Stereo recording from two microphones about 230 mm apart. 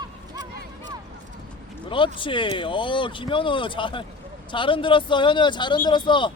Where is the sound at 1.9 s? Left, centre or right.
Left.